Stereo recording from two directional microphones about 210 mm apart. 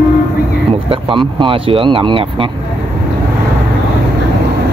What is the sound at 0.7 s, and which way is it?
Speech, 25° right (ahead or behind).